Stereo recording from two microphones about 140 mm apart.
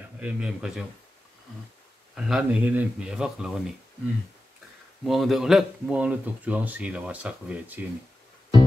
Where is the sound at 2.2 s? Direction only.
5° right (ahead or behind).